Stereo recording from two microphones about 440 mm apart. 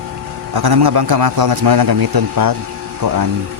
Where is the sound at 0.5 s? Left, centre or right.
Right.